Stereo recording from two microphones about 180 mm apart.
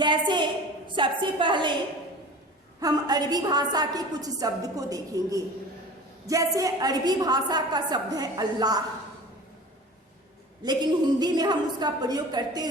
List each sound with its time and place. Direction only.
0.0 s a sound: 25° right (ahead or behind)
0.9 s a woman's voice: 25° right (ahead or behind)
2.8 s a woman's voice: 20° right (ahead or behind)
10.6 s a woman's voice: 25° right (ahead or behind)